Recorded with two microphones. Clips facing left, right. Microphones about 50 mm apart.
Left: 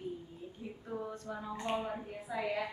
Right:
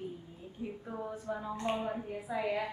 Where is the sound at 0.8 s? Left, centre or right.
Centre.